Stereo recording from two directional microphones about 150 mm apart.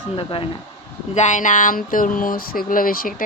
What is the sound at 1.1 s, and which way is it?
Speech, 55° left (ahead or behind).